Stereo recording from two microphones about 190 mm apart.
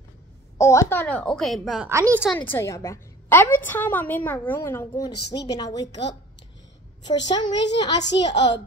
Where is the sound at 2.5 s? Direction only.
15° left (ahead or behind).